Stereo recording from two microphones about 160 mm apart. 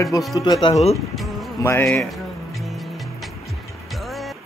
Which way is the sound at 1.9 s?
Centre (ahead or behind).